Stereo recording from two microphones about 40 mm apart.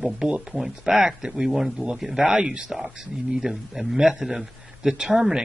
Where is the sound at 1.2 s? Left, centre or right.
Right.